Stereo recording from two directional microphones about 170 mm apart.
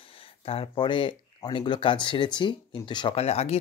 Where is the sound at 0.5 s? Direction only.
30° left (ahead or behind).